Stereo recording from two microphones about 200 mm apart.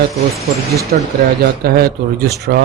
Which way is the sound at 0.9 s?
50° right (ahead or behind).